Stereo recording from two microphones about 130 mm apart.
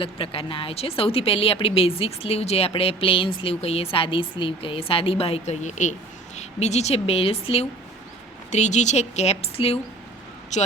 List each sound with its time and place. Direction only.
0.0 s a woman's voice: 45° left (ahead or behind)
8.4 s a woman's voice: 65° left (ahead or behind)